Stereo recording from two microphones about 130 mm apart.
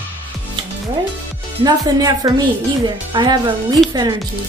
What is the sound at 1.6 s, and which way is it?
Speech, 30° right (ahead or behind).